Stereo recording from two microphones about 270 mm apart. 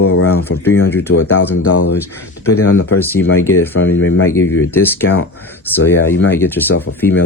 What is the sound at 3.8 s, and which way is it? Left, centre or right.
Speech, left.